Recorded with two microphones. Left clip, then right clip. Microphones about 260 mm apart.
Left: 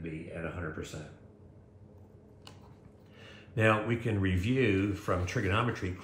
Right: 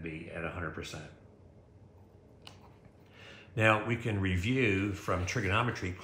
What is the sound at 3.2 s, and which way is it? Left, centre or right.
Speech, centre.